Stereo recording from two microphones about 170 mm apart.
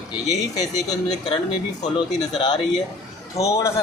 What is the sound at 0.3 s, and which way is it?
Speech, 20° left (ahead or behind).